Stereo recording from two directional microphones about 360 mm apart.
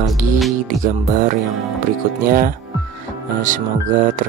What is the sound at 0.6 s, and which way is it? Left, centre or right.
Speech, right.